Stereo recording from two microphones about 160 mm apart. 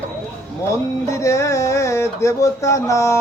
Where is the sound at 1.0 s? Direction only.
20° left (ahead or behind).